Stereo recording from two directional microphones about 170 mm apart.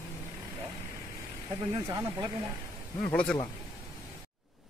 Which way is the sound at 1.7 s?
20° right (ahead or behind).